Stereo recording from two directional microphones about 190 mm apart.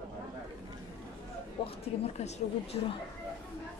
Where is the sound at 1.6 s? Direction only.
25° left (ahead or behind).